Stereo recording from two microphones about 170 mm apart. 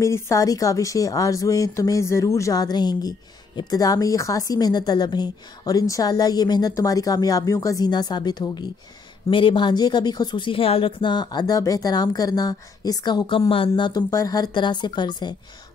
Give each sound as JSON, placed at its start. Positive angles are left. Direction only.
{"t": 0.0, "sound": "a woman's voice", "side_deg": 20}